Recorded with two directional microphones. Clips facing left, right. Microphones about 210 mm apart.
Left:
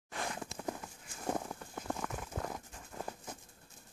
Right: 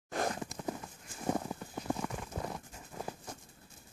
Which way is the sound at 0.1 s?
45° right (ahead or behind).